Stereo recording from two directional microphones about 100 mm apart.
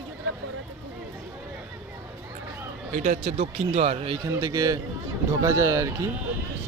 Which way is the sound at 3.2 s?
85° right.